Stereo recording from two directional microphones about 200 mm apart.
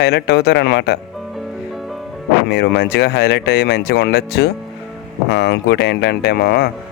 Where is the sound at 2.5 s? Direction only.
55° left (ahead or behind).